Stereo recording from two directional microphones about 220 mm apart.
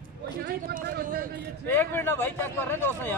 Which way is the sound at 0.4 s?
45° right (ahead or behind).